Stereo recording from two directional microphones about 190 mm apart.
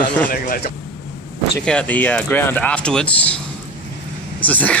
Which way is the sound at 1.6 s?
5° left (ahead or behind).